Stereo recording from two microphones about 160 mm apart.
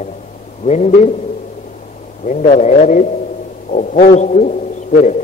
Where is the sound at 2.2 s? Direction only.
45° left (ahead or behind).